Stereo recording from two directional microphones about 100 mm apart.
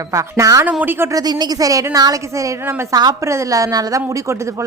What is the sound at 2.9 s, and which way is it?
Speech, 40° right (ahead or behind).